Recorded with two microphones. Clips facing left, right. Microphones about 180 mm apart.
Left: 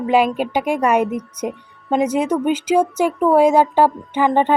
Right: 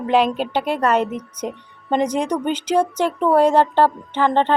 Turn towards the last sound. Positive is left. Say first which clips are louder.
# left 2 dB
turn(degrees=10)  # may be behind; listen again after turning